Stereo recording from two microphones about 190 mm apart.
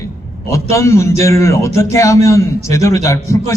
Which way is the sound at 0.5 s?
15° left (ahead or behind).